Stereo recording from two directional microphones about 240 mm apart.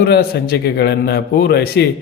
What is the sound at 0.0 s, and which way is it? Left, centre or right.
A man's voice, left.